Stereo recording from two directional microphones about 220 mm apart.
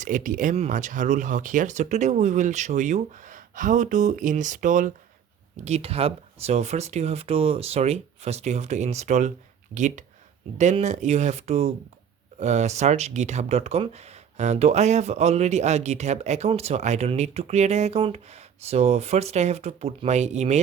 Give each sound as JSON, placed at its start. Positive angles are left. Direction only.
{"t": 0.0, "sound": "speech", "side_deg": -35}